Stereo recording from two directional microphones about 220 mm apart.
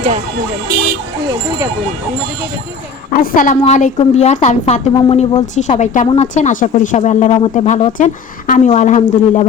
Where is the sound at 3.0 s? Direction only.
35° left (ahead or behind).